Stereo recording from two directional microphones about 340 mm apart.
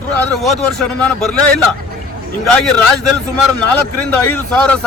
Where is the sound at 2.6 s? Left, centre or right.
Centre.